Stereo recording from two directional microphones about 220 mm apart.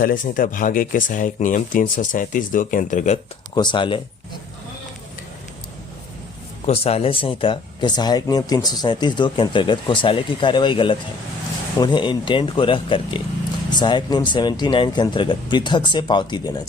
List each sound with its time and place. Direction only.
0.0 s speech: 40° left (ahead or behind)
3.5 s speech: 20° left (ahead or behind)
6.7 s speech: 25° left (ahead or behind)